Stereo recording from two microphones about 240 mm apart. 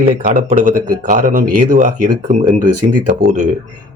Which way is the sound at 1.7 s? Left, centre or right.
Right.